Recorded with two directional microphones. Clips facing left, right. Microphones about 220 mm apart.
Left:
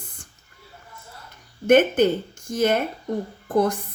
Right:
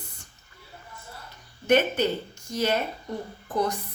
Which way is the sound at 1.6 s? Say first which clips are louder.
Left 6 dB; 50° left (ahead or behind).